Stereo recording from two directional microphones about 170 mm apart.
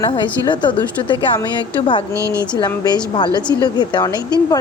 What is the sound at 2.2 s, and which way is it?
Speech, 15° right (ahead or behind).